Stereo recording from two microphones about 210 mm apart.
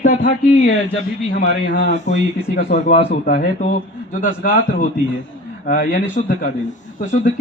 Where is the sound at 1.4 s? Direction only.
55° left (ahead or behind).